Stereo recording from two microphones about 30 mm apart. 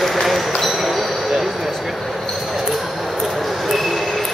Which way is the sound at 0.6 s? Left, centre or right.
Centre.